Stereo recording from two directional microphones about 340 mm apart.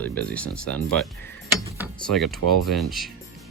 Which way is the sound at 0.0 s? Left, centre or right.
Centre.